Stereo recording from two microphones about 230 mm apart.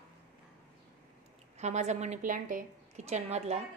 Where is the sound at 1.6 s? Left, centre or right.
Right.